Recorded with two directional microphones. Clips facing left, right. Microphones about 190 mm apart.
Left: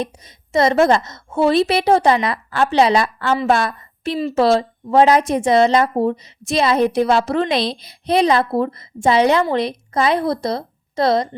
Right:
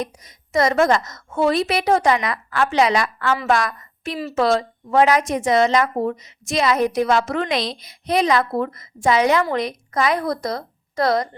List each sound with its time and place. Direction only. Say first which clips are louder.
0.0 s a woman's voice: left 3 dB; 30° left (ahead or behind)